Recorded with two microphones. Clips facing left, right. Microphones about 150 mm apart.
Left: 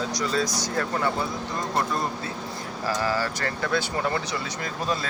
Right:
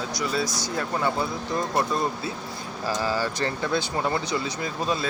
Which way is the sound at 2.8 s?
15° right (ahead or behind).